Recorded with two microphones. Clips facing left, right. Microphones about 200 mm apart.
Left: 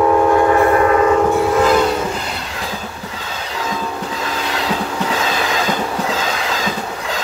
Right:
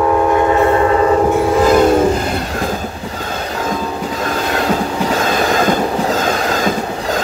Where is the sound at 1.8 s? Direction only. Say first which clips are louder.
Right 6 dB; 50° right (ahead or behind).